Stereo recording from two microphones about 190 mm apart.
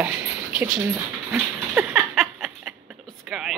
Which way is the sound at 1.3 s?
10° right (ahead or behind).